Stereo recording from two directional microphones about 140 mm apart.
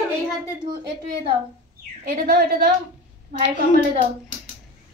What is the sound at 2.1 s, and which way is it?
Speech, 90° right.